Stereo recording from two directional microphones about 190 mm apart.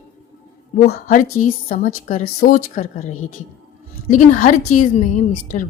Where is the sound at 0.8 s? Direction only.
50° left (ahead or behind).